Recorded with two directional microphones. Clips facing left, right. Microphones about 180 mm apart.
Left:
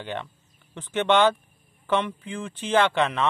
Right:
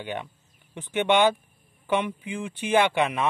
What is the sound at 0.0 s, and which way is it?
Speech, 10° right (ahead or behind).